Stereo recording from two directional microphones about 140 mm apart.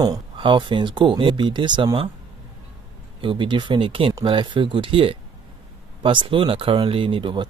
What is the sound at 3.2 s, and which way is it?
Speech, 35° right (ahead or behind).